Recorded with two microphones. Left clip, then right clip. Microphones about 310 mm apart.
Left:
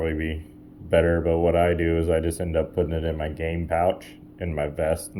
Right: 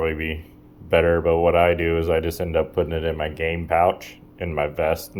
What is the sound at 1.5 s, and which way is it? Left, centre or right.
Speech, centre.